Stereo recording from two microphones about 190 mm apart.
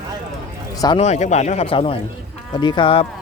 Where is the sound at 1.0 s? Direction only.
35° left (ahead or behind).